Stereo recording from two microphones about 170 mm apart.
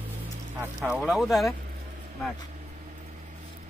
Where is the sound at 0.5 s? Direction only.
10° right (ahead or behind).